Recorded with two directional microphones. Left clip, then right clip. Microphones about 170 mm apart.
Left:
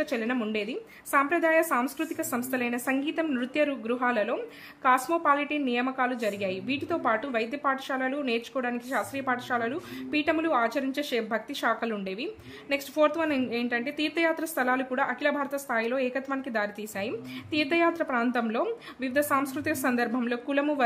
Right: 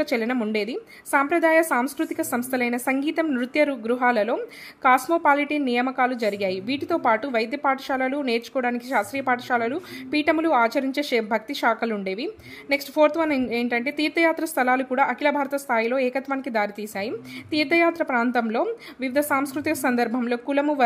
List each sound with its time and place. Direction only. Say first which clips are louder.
0.0 s a woman's voice: right 5 dB; 25° right (ahead or behind)